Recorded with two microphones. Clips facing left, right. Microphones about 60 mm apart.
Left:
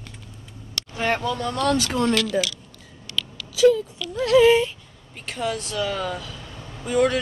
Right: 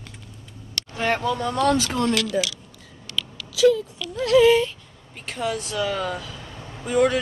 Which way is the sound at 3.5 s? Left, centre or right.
Left.